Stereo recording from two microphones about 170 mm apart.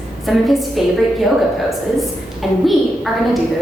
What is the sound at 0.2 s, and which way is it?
A woman's voice, centre (ahead or behind).